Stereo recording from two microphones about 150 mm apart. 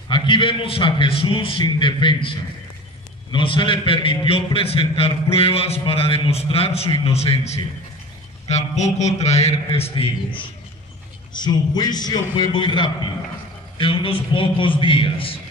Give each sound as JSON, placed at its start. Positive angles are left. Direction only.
{"t": 0.1, "sound": "a man's voice", "side_deg": 35}
{"t": 11.3, "sound": "a man's voice", "side_deg": 30}